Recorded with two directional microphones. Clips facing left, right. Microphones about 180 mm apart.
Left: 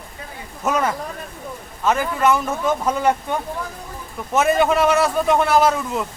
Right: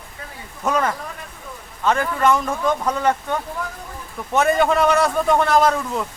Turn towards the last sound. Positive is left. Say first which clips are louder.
# even
turn(degrees=5)  # may be behind; listen again after turning